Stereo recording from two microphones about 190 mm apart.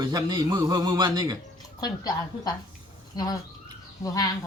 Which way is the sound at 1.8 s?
20° left (ahead or behind).